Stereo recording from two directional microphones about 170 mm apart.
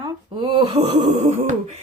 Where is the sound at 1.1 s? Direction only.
40° right (ahead or behind).